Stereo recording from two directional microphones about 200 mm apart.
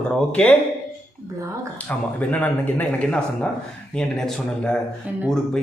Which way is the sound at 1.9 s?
5° left (ahead or behind).